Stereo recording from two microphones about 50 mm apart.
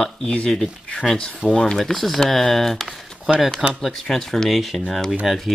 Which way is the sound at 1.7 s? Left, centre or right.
Centre.